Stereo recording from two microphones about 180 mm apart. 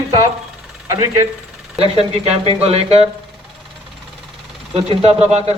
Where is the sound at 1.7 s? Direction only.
35° right (ahead or behind).